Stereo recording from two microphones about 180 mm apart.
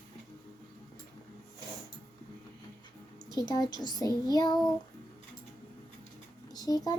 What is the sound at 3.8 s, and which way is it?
Child singing, 25° left (ahead or behind).